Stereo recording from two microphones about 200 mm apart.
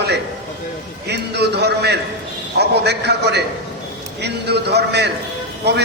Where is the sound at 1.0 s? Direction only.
55° right (ahead or behind).